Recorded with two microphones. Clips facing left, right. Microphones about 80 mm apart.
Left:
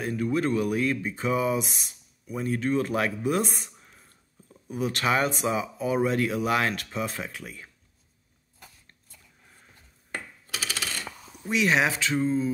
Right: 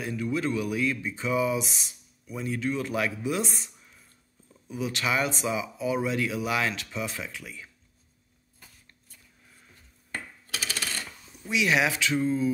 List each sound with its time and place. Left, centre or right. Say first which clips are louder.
0.0 s speech: left 3 dB; left
10.1 s a sound: left 1 dB; centre
11.3 s speech: left 1 dB; left